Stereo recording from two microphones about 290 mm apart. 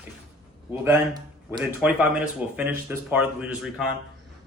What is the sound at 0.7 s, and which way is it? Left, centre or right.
Speech, centre.